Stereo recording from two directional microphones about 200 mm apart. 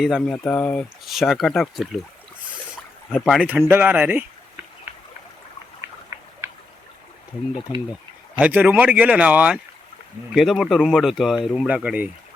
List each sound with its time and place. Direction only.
0.0 s speech: centre (ahead or behind)
3.1 s speech: centre (ahead or behind)
6.1 s a sound: 15° right (ahead or behind)
8.4 s speech: 5° right (ahead or behind)